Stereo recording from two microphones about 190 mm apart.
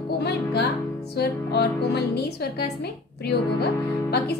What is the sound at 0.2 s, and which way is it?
Music, 60° left (ahead or behind).